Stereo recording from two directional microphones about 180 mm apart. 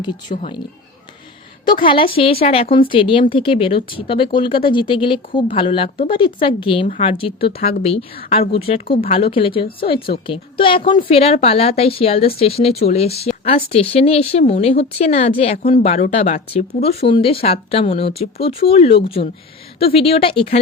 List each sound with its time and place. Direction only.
0.0 s speech: 25° left (ahead or behind)
1.8 s speech: 30° left (ahead or behind)